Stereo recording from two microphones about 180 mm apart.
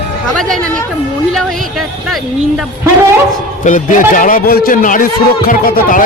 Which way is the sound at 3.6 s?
45° left (ahead or behind).